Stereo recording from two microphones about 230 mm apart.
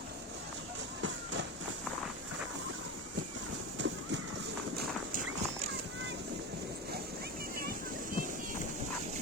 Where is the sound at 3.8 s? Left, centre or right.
Right.